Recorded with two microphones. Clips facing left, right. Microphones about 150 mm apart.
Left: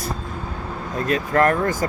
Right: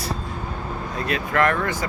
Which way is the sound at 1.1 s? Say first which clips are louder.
Left 3 dB; 40° left (ahead or behind).